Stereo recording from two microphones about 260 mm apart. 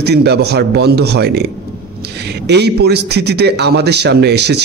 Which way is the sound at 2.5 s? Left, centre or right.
Right.